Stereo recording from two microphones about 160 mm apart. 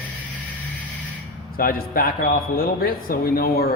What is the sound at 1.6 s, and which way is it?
A man's voice, 65° left (ahead or behind).